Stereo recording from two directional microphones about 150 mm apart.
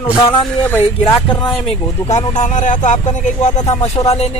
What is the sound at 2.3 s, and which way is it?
Speech, 55° left (ahead or behind).